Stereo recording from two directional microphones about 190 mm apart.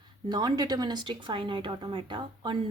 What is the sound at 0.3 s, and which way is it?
Speech, 20° right (ahead or behind).